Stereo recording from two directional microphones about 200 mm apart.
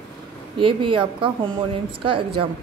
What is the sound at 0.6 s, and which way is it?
A woman's voice, 25° right (ahead or behind).